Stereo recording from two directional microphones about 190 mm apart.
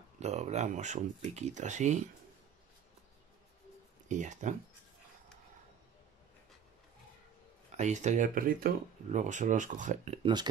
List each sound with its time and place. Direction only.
0.2 s speech: 35° right (ahead or behind)
4.1 s speech: 40° right (ahead or behind)
7.7 s speech: 40° right (ahead or behind)
10.2 s speech: 20° right (ahead or behind)